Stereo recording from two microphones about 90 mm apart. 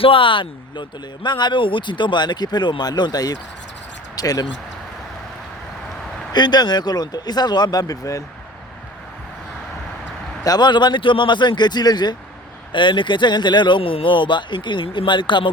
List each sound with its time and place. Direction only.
0.0 s speech: 80° left; by 4.4 s 45° left (ahead or behind)
6.3 s speech: 50° left (ahead or behind)
10.4 s speech: 50° left (ahead or behind)
12.7 s speech: 65° left (ahead or behind)